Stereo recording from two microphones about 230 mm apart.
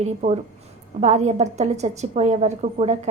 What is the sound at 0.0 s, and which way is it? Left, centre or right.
A woman's voice, right.